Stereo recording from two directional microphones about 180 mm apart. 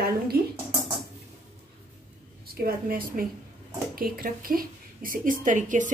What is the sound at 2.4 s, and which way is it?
A woman's voice, 55° right (ahead or behind).